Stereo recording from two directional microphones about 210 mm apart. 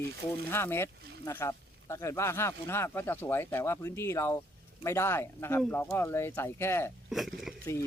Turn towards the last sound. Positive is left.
turn(degrees=0)  # may be behind; listen again after turning